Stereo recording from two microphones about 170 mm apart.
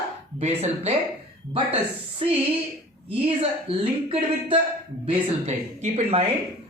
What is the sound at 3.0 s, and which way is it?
Speech, 35° right (ahead or behind).